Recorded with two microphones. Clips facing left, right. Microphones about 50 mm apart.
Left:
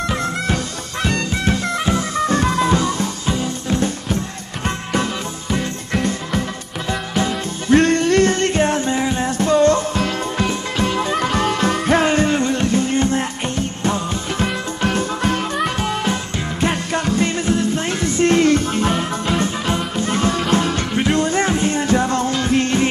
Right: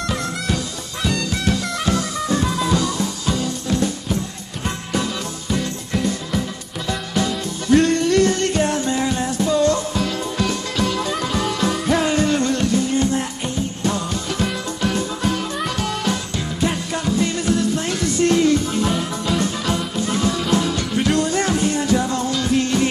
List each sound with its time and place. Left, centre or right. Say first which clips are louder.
0.0 s music: left 3 dB; left
0.9 s music: left 2 dB; left
2.1 s music: left 4 dB; left
5.9 s music: left 1 dB; left
6.9 s music: left 1 dB; left
9.7 s music: left 3 dB; left
10.4 s music: even; left
16.6 s music: left 2 dB; left
17.5 s music: left 1 dB; left
18.4 s music: left 2 dB; left